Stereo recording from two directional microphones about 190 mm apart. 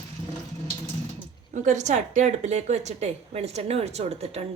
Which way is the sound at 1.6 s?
40° right (ahead or behind).